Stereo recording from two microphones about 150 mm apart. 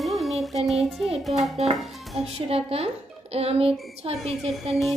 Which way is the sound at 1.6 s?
45° right (ahead or behind).